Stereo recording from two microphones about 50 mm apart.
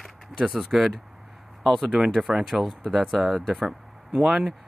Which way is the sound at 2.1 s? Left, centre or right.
Centre.